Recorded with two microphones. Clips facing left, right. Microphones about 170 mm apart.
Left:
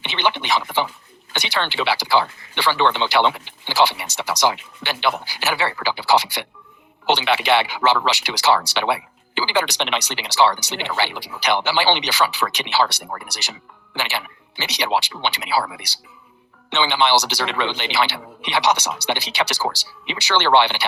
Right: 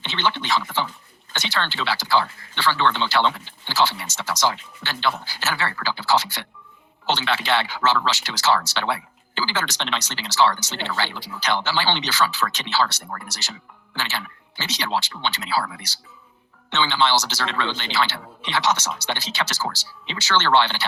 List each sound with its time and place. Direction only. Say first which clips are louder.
0.0 s speech: left 2 dB; 15° left (ahead or behind)